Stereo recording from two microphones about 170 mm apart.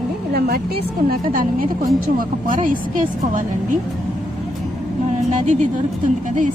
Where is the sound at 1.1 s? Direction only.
55° right (ahead or behind).